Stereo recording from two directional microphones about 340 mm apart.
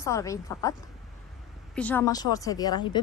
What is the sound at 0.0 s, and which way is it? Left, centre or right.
Speech, centre.